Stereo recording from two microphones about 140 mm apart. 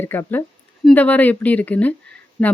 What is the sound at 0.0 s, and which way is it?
Speech, 15° left (ahead or behind).